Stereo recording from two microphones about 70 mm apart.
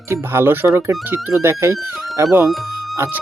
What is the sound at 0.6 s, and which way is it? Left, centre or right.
Speech, right.